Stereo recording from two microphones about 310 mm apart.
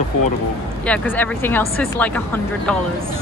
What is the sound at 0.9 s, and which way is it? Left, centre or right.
Speech, centre.